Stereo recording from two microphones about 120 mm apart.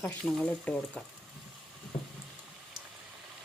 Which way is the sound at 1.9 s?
55° left (ahead or behind).